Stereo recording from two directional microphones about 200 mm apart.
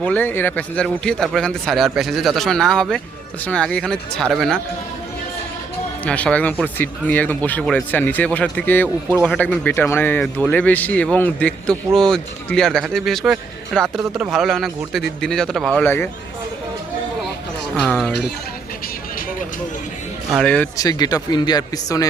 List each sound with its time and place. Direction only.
0.0 s speech: 10° left (ahead or behind)
6.1 s speech: 5° left (ahead or behind)
17.8 s speech: 5° left (ahead or behind)
20.3 s speech: 5° left (ahead or behind)
20.7 s speech: 20° left (ahead or behind)